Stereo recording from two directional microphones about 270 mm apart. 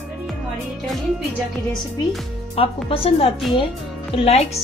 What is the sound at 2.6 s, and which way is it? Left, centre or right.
Speech, left.